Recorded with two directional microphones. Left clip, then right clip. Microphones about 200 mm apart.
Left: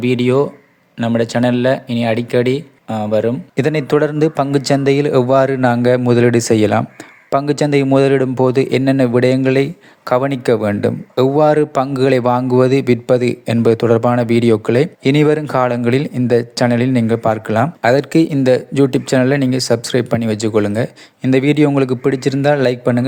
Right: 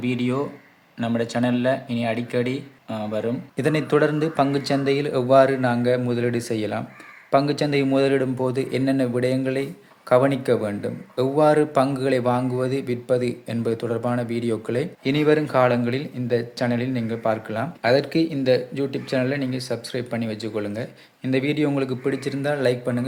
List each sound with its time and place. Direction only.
0.0 s speech: 45° left (ahead or behind)